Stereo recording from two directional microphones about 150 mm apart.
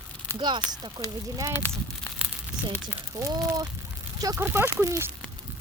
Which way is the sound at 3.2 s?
25° right (ahead or behind).